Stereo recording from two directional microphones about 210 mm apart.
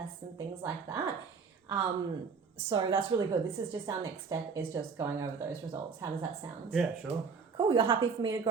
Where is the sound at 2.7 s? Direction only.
20° right (ahead or behind).